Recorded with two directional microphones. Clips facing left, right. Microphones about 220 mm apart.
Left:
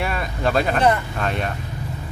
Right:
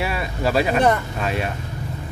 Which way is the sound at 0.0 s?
5° right (ahead or behind).